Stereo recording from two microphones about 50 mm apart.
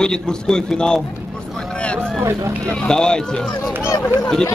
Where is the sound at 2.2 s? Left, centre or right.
Right.